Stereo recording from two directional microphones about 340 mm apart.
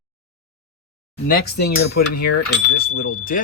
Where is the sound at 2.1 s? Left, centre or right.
Left.